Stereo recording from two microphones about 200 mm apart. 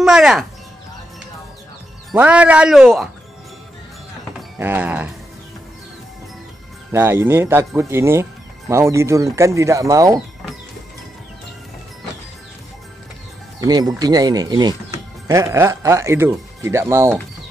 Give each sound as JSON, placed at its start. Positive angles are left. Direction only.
{"t": 0.0, "sound": "speech", "side_deg": 0}
{"t": 2.1, "sound": "speech", "side_deg": -5}
{"t": 4.6, "sound": "speech", "side_deg": -10}
{"t": 6.9, "sound": "speech", "side_deg": -10}
{"t": 13.6, "sound": "speech", "side_deg": -20}